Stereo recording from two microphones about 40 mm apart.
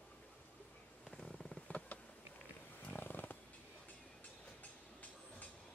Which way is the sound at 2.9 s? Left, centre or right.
Left.